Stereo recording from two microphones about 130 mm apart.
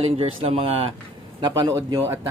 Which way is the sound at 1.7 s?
20° right (ahead or behind).